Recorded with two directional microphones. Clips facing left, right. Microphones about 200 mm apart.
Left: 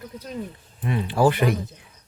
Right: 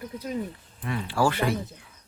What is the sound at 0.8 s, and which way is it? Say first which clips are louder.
Speech: left 5 dB; 20° left (ahead or behind).